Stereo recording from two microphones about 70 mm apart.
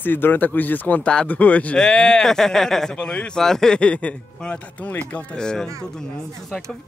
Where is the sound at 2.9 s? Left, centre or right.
Centre.